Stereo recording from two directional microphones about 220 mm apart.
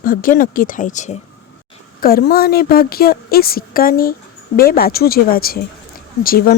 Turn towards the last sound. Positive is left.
turn(degrees=40)  # may be behind; listen again after turning